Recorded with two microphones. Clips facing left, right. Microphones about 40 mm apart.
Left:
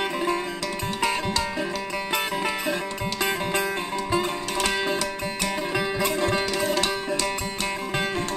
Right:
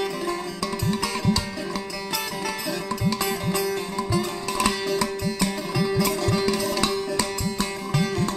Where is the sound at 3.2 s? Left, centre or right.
Left.